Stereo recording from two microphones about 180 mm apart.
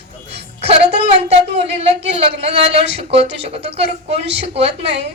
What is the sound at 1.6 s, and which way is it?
A woman's voice, 35° right (ahead or behind).